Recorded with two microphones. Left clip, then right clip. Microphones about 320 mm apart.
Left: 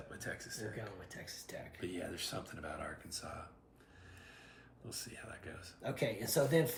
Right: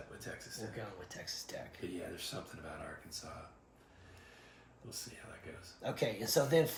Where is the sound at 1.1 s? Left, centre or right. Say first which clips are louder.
Right 3 dB; centre.